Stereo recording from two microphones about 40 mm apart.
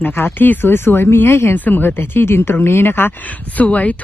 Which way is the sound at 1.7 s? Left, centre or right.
Left.